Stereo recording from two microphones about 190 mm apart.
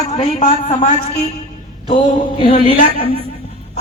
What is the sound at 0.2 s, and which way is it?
Speech, 30° left (ahead or behind).